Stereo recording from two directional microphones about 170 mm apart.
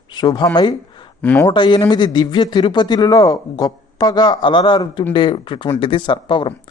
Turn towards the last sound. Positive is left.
turn(degrees=30)  # may be behind; listen again after turning